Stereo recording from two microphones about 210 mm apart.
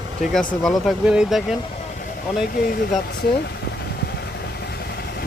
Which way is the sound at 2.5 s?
45° left (ahead or behind).